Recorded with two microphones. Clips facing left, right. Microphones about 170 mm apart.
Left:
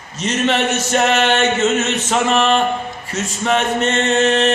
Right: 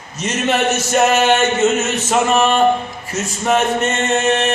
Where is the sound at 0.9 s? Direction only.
5° right (ahead or behind).